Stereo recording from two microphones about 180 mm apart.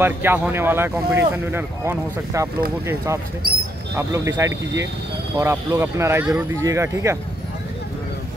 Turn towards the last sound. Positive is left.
turn(degrees=-15)  # may be behind; listen again after turning